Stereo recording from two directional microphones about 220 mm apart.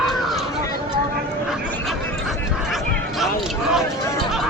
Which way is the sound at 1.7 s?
5° left (ahead or behind).